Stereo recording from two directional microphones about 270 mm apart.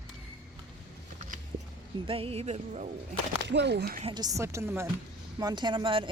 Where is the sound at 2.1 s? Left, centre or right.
Right.